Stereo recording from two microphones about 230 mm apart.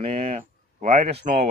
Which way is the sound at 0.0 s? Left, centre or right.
Right.